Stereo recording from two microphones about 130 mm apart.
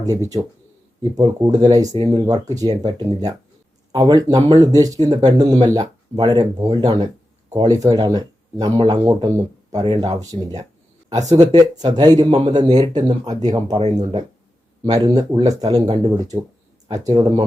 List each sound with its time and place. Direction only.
1.1 s speech: 30° right (ahead or behind)